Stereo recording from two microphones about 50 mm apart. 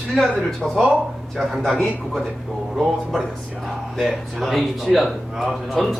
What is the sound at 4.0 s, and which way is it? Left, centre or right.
Speech, centre.